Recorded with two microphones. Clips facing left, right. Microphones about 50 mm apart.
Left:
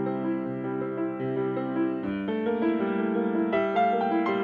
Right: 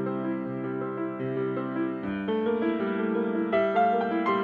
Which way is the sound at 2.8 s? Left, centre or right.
Left.